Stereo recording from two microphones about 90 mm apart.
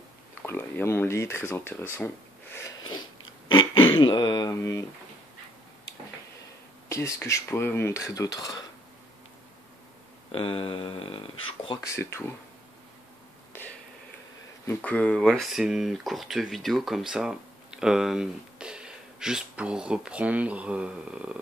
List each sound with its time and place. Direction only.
0.5 s speech: 25° left (ahead or behind)
3.5 s speech: 65° left (ahead or behind)
4.5 s cutlery: 35° left (ahead or behind)
6.9 s speech: 30° left (ahead or behind)
7.5 s cutlery: 25° left (ahead or behind); by 8.6 s 45° left (ahead or behind)
10.3 s speech: 90° left
11.8 s cutlery: 30° left (ahead or behind)
14.8 s speech: 15° left (ahead or behind); by 21.4 s 10° right (ahead or behind)